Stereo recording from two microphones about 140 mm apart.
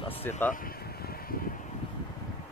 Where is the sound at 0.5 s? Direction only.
90° left.